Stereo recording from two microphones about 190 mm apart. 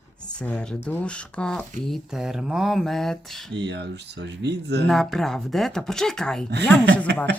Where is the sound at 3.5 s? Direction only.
65° right (ahead or behind).